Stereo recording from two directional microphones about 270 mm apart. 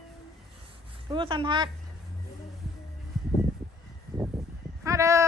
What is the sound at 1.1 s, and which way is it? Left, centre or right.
Speech, centre.